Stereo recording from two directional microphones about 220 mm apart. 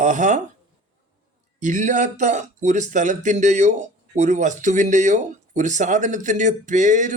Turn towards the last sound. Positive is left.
turn(degrees=-35)  # may be behind; listen again after turning